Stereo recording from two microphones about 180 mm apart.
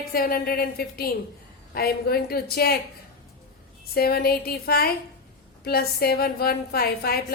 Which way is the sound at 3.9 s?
60° left (ahead or behind).